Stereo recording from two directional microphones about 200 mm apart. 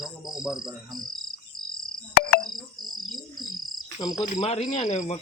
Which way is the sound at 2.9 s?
Centre (ahead or behind).